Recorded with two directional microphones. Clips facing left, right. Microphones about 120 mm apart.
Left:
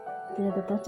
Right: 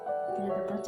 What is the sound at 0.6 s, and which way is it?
Music, 50° left (ahead or behind).